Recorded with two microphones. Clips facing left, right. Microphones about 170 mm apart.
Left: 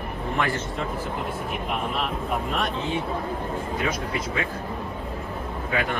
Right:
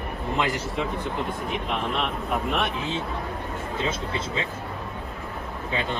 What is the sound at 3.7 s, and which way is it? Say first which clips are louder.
Speech: right 1 dB; 25° right (ahead or behind).